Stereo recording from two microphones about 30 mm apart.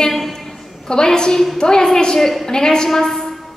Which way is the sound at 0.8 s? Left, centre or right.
Left.